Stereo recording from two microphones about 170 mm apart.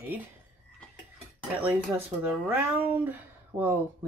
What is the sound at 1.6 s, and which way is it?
Speech, 10° right (ahead or behind).